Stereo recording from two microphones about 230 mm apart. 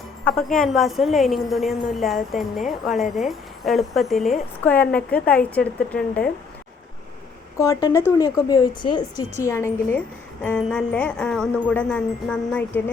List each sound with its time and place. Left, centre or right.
0.3 s a woman's voice: centre
7.6 s a woman's voice: centre